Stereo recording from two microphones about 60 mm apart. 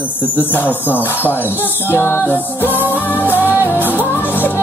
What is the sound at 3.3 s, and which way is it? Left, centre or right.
Music, right.